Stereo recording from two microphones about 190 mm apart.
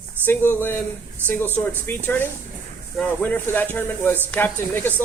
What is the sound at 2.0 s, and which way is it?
Speech, 10° left (ahead or behind).